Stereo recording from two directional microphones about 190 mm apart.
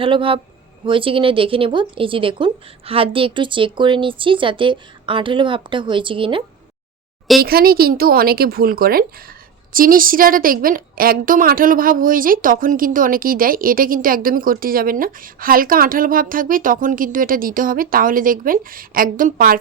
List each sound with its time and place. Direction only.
0.0 s speech: 30° right (ahead or behind)
7.4 s a woman's voice: 55° right (ahead or behind)